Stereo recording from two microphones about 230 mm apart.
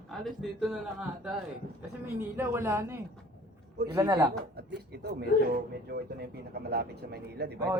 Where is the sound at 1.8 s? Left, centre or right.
Centre.